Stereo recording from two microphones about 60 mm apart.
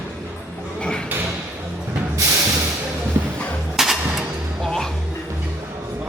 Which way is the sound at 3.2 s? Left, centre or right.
Right.